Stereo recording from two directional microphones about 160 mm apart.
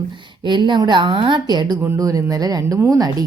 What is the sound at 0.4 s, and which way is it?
A woman's voice, 30° right (ahead or behind).